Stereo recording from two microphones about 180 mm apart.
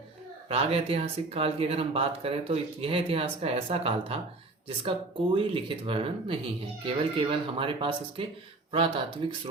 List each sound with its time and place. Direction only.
0.4 s speech: 35° right (ahead or behind)